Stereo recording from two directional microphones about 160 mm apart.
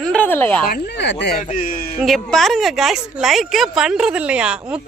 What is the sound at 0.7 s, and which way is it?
Speech, 90° left.